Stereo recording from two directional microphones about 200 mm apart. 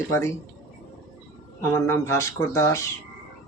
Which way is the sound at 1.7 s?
15° left (ahead or behind).